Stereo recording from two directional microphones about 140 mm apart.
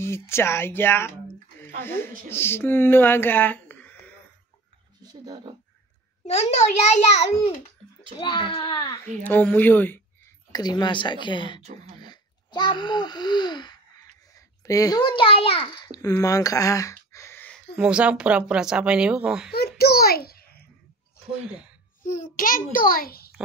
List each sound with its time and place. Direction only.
0.0 s speech: 20° left (ahead or behind)
5.0 s speech: 30° right (ahead or behind)
6.2 s a child's voice: 50° left (ahead or behind)
8.2 s a woman's voice: 35° left (ahead or behind)
8.9 s speech: 15° left (ahead or behind)
10.5 s a woman's voice: 30° left (ahead or behind)
11.6 s speech: 55° right (ahead or behind)
12.0 s a child's voice: 30° left (ahead or behind)
15.7 s a child's voice: 30° left (ahead or behind)
16.2 s a sound: 25° left (ahead or behind)
17.7 s a woman's voice: 5° right (ahead or behind)
19.5 s a child's voice: 90° left
21.5 s speech: 5° right (ahead or behind)
22.3 s a child's voice: 80° left